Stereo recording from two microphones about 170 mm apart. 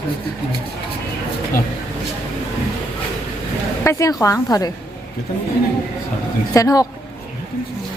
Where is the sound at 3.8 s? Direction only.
15° left (ahead or behind).